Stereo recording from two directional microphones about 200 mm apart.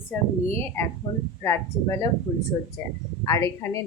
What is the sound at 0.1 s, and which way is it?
Speech, 10° left (ahead or behind).